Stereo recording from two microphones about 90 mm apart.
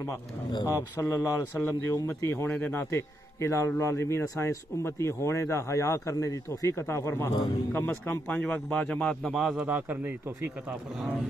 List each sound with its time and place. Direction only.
0.7 s a man's voice: 30° left (ahead or behind); by 9.1 s 10° left (ahead or behind)
9.2 s a man's voice: 5° right (ahead or behind)
9.7 s speech: 20° right (ahead or behind)